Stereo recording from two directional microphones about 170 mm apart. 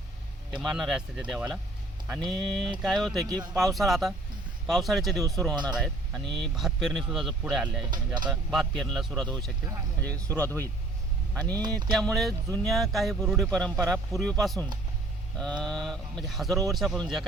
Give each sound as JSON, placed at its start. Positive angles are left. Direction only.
{"t": 0.6, "sound": "speech", "side_deg": 0}
{"t": 3.2, "sound": "speech", "side_deg": -25}
{"t": 3.5, "sound": "speech", "side_deg": 0}
{"t": 7.9, "sound": "speech", "side_deg": -25}
{"t": 8.3, "sound": "speech", "side_deg": 0}